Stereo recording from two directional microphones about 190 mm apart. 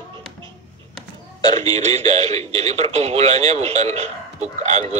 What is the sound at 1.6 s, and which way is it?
Speech, 35° right (ahead or behind).